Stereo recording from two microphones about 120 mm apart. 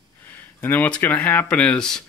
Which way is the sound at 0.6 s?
15° left (ahead or behind).